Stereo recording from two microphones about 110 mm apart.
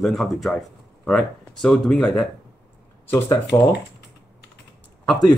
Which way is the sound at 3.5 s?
25° left (ahead or behind).